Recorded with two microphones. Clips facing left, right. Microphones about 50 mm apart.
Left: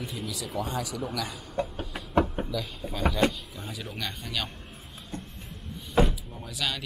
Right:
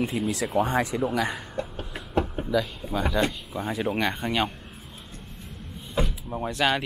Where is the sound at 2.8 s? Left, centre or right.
Centre.